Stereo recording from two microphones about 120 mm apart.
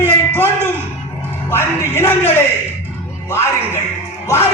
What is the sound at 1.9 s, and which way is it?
Speech, 20° left (ahead or behind).